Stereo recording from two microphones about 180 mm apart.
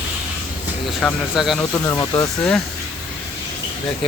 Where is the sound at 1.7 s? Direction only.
20° left (ahead or behind).